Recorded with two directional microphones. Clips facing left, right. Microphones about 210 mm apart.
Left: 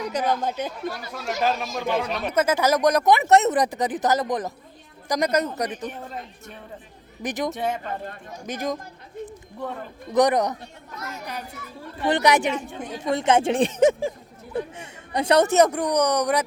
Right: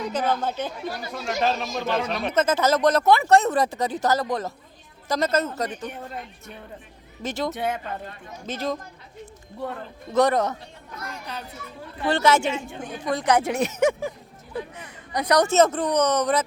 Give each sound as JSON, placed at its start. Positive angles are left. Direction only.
{"t": 0.0, "sound": "speech", "side_deg": 10}
{"t": 0.7, "sound": "speech", "side_deg": 0}
{"t": 7.2, "sound": "speech", "side_deg": 15}
{"t": 7.5, "sound": "speech", "side_deg": 0}
{"t": 8.4, "sound": "speech", "side_deg": 15}
{"t": 10.1, "sound": "speech", "side_deg": 15}
{"t": 12.0, "sound": "speech", "side_deg": 15}
{"t": 15.4, "sound": "speech", "side_deg": 15}